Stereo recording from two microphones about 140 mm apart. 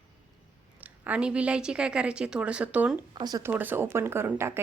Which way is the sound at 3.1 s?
30° right (ahead or behind).